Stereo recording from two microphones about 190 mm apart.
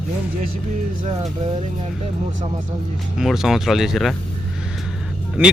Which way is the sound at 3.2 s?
Centre (ahead or behind).